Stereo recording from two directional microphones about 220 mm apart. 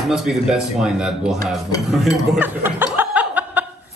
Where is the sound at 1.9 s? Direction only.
Centre (ahead or behind).